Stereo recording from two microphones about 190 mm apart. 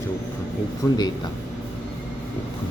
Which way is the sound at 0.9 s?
20° left (ahead or behind).